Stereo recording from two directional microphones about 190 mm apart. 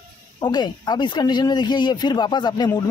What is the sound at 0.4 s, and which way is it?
Speech, 20° left (ahead or behind).